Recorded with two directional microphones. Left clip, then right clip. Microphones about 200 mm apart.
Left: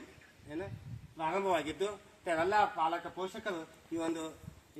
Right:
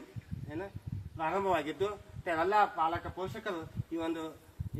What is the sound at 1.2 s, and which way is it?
A man's voice, 10° left (ahead or behind).